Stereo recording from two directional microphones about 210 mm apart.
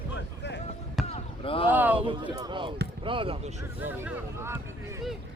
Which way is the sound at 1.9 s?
25° right (ahead or behind).